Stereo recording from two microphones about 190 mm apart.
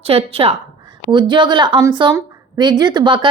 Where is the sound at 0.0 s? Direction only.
30° right (ahead or behind).